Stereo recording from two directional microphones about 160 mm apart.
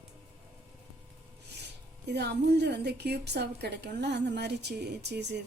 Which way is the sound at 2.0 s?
90° right.